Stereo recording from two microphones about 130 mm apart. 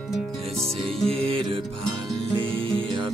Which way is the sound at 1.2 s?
45° right (ahead or behind).